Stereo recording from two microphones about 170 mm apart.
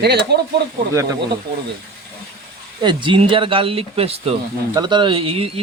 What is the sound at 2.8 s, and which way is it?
Speech, 30° right (ahead or behind).